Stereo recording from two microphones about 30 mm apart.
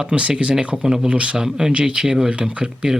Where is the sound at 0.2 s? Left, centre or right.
Right.